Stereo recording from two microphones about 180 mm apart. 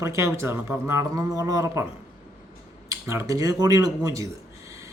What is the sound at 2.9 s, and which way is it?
Speech, 15° right (ahead or behind).